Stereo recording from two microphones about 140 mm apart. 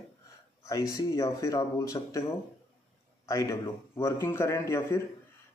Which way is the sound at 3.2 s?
20° left (ahead or behind).